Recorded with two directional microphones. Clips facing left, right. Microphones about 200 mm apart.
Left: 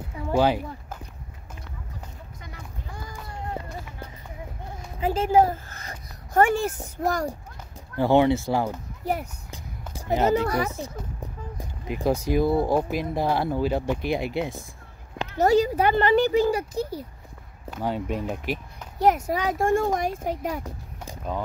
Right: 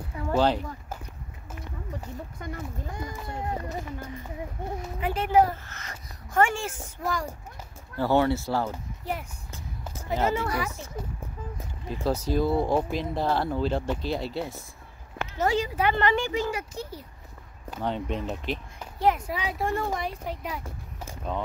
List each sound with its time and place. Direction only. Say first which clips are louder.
0.3 s speech: left 2 dB; 10° left (ahead or behind)
3.0 s run: right 2 dB; 20° right (ahead or behind)
5.1 s speech: left 2 dB; 25° left (ahead or behind)
8.0 s speech: left 4 dB; 20° left (ahead or behind)
9.0 s a child's voice: left 6 dB; 40° left (ahead or behind)
10.1 s speech: left 5 dB; 20° left (ahead or behind)
15.3 s a child's voice: left 6 dB; 40° left (ahead or behind)
17.6 s speech: left 2 dB; 5° left (ahead or behind)
18.9 s speech: left 4 dB; 45° left (ahead or behind)
20.6 s a sound: left 2 dB; 15° left (ahead or behind)